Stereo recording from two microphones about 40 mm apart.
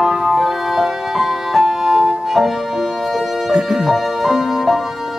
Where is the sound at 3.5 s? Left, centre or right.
Right.